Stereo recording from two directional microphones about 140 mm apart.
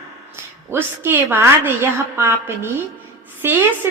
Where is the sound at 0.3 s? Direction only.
15° right (ahead or behind).